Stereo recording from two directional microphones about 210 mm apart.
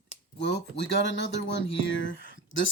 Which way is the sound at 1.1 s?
60° left (ahead or behind).